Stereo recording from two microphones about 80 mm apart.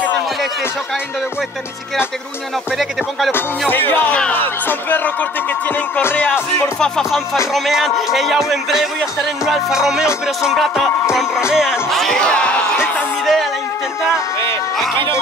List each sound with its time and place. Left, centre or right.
3.3 s speech: left
6.8 s music: centre
13.2 s a sound: centre